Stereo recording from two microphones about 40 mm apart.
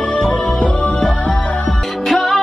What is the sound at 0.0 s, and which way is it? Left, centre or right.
Music, left.